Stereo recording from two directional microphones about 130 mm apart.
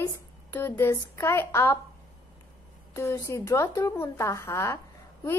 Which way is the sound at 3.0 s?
20° left (ahead or behind).